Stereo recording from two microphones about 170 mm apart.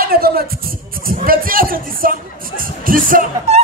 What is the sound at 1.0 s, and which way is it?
Music, 55° right (ahead or behind).